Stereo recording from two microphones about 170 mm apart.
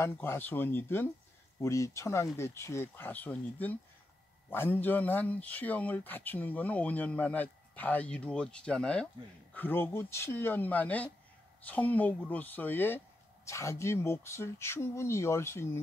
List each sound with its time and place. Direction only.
0.0 s speech: 15° left (ahead or behind)